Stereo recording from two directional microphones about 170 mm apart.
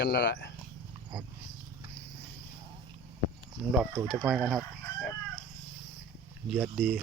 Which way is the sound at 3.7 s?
10° right (ahead or behind).